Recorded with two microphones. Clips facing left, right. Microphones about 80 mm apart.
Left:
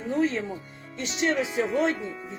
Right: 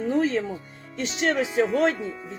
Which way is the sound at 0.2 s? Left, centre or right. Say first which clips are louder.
Right 1 dB; right.